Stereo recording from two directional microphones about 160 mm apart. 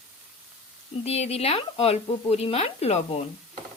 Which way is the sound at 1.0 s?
40° left (ahead or behind).